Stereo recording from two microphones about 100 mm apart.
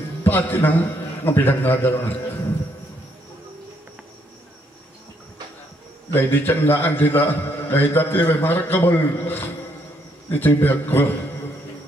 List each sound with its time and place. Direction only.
0.2 s a man's voice: 20° left (ahead or behind)
6.1 s a man's voice: 20° left (ahead or behind)